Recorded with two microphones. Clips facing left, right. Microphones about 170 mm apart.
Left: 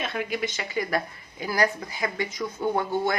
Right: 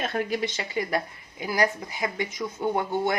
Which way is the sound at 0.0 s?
40° right (ahead or behind).